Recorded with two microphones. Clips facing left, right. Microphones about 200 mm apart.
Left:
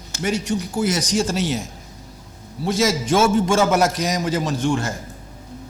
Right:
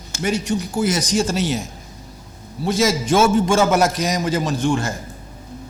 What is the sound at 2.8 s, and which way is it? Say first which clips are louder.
Speech: right 1 dB; 5° right (ahead or behind).